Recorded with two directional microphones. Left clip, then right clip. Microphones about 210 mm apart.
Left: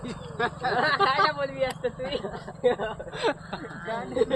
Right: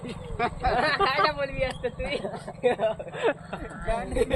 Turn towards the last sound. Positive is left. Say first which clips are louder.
# even
turn(degrees=-60)  # may be behind; listen again after turning